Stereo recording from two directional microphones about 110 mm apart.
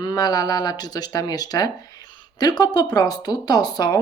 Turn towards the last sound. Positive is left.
turn(degrees=40)  # may be behind; listen again after turning